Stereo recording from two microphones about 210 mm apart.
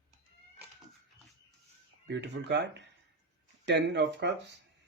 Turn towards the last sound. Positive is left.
turn(degrees=-55)  # may be behind; listen again after turning